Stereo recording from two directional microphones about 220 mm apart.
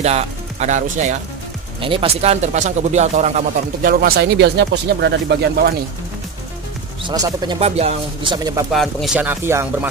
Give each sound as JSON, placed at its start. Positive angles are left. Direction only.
{"t": 0.0, "sound": "speech", "side_deg": -30}
{"t": 7.0, "sound": "speech", "side_deg": -20}
{"t": 8.7, "sound": "speech", "side_deg": 0}